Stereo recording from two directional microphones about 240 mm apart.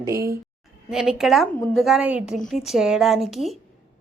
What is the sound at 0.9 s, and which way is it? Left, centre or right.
A woman's voice, centre.